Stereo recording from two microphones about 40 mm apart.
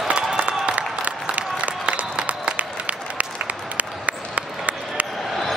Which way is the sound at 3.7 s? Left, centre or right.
Right.